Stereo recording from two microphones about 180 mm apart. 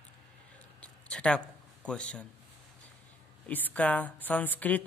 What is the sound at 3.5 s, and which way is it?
Speech, 10° left (ahead or behind).